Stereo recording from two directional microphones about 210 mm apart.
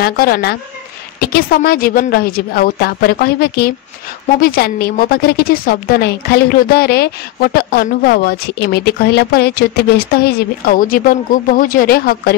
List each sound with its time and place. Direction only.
0.0 s a woman's voice: 45° left (ahead or behind)